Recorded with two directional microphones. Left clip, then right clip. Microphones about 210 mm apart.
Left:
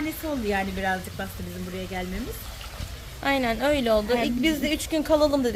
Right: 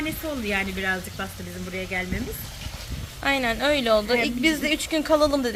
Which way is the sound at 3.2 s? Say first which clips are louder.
Right 1 dB; 10° left (ahead or behind).